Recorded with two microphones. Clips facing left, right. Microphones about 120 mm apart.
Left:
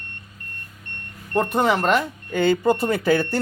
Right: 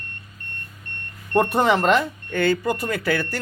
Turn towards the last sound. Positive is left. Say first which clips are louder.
# left 4 dB
turn(degrees=20)  # may be behind; listen again after turning